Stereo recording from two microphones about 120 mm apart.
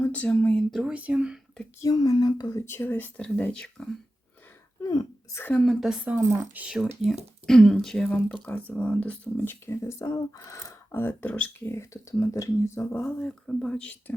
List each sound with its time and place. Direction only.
0.0 s speech: 15° left (ahead or behind)
0.7 s speech: 5° right (ahead or behind)
1.8 s speech: 30° left (ahead or behind); by 3.8 s 10° left (ahead or behind)
4.8 s throat clearing: 35° left (ahead or behind)
5.4 s speech: 15° left (ahead or behind)
5.6 s speech: 5° right (ahead or behind)
6.1 s speech: 15° right (ahead or behind)
7.4 s speech: 5° left (ahead or behind); by 13.1 s 20° left (ahead or behind)
13.1 s speech: 5° left (ahead or behind)